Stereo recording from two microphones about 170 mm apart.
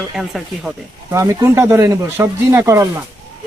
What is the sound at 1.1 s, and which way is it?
Speech, 15° right (ahead or behind).